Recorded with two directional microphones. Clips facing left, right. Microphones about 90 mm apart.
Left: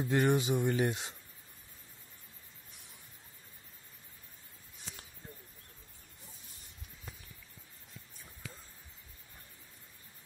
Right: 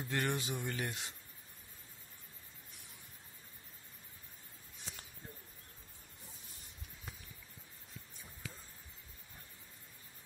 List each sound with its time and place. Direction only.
0.0 s speech: 20° left (ahead or behind)